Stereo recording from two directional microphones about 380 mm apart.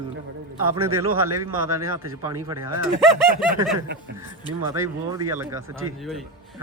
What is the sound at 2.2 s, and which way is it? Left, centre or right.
Speech, centre.